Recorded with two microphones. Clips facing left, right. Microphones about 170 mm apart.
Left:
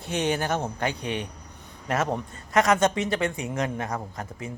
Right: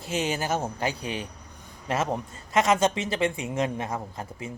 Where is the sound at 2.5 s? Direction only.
25° right (ahead or behind).